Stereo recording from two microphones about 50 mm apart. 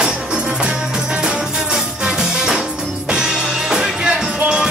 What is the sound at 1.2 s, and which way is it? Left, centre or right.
Music, centre.